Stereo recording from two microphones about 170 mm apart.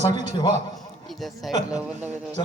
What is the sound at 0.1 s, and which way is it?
Speech, 25° left (ahead or behind).